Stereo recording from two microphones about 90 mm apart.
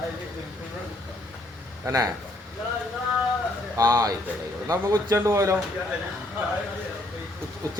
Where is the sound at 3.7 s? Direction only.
40° right (ahead or behind).